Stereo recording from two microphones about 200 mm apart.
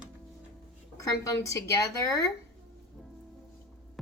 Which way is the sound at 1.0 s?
15° left (ahead or behind).